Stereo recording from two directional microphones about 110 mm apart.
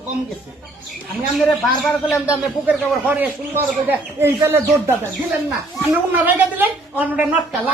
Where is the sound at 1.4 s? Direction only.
Centre (ahead or behind).